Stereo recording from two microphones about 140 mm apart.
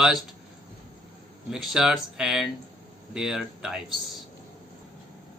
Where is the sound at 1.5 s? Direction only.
5° right (ahead or behind).